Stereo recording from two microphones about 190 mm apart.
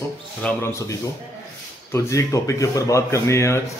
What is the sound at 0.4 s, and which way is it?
Speech, 5° left (ahead or behind).